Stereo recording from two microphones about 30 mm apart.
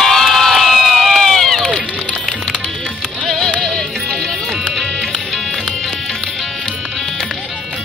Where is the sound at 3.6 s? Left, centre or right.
Centre.